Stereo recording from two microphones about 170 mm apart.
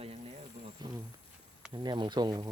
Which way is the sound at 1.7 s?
25° right (ahead or behind).